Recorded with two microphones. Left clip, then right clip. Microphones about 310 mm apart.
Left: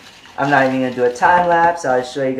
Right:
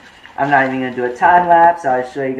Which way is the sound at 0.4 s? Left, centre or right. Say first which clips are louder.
Right 1 dB; left.